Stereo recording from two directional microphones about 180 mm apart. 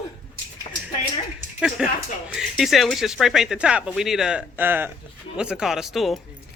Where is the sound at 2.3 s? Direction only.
Centre (ahead or behind).